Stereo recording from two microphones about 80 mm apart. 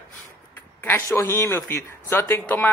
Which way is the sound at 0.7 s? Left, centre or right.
Left.